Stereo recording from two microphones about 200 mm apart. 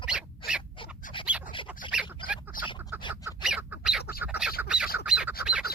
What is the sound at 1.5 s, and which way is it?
Duck, 25° left (ahead or behind).